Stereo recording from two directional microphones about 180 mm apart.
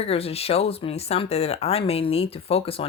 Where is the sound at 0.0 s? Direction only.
35° left (ahead or behind).